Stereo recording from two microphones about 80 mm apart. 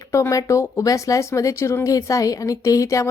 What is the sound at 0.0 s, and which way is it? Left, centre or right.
A woman's voice, left.